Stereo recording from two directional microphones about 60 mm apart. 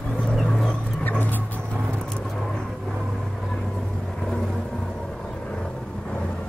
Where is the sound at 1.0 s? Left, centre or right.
Left.